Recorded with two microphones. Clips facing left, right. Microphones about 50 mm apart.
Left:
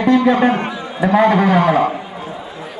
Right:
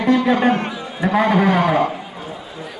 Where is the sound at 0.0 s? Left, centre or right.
Centre.